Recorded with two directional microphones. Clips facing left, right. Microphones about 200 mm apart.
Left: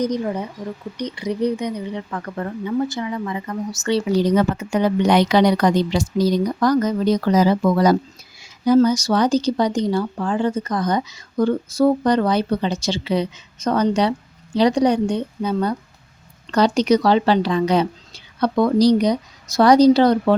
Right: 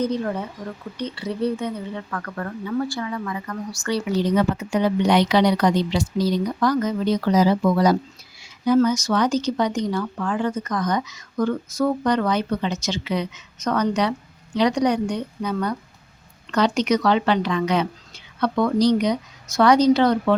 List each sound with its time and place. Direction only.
0.0 s speech: 15° left (ahead or behind)
4.2 s a woman's voice: 40° left (ahead or behind)
8.4 s speech: 40° left (ahead or behind)